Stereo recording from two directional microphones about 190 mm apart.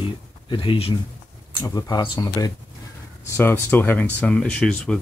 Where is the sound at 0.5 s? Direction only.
25° left (ahead or behind).